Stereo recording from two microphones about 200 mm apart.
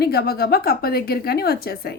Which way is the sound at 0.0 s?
50° left (ahead or behind).